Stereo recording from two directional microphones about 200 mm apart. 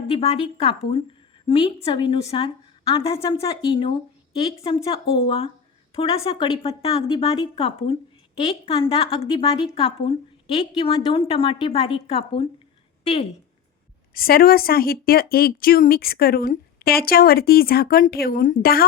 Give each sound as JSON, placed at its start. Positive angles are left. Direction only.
{"t": 0.1, "sound": "a woman's voice", "side_deg": 30}
{"t": 14.1, "sound": "a woman's voice", "side_deg": 45}